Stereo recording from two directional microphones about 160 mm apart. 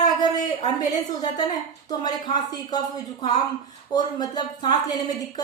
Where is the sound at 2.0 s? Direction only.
25° left (ahead or behind).